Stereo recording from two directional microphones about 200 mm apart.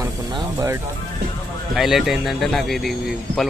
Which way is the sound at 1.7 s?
Centre (ahead or behind).